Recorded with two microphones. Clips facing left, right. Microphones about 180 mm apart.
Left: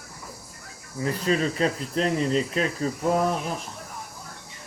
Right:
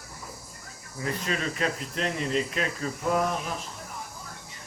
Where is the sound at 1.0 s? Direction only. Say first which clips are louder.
Left 6 dB; 35° left (ahead or behind).